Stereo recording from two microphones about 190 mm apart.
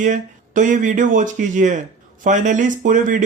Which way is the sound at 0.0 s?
40° right (ahead or behind).